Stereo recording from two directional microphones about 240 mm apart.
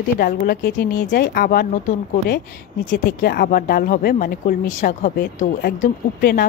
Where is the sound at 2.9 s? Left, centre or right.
Left.